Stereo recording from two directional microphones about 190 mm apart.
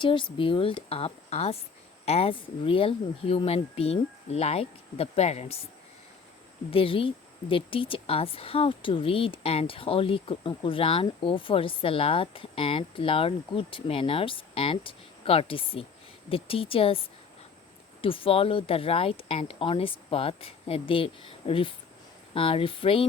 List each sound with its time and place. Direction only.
0.0 s speech: 25° left (ahead or behind)
6.7 s speech: 30° left (ahead or behind)